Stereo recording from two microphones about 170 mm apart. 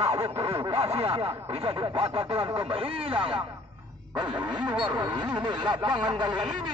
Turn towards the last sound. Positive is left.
turn(degrees=-25)  # may be behind; listen again after turning